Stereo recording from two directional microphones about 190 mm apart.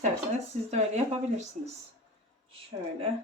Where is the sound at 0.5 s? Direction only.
40° right (ahead or behind).